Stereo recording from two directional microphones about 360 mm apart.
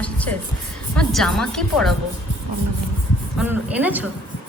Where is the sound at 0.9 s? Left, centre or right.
Centre.